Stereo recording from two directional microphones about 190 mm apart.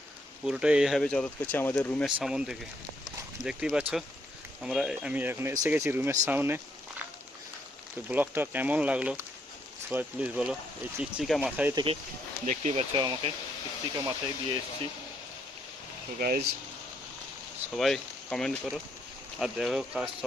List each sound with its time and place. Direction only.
0.4 s speech: 5° right (ahead or behind)
8.1 s speech: 10° right (ahead or behind)
11.7 s speech: 20° right (ahead or behind)
12.5 s speech: 40° right (ahead or behind)
12.9 s speech: 25° right (ahead or behind)
16.1 s speech: 50° right (ahead or behind)
17.7 s speech: centre (ahead or behind)